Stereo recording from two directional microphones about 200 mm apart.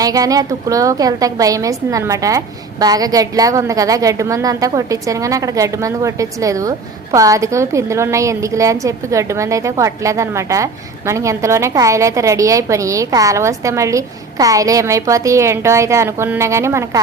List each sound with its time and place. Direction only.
0.0 s a woman's voice: 15° right (ahead or behind)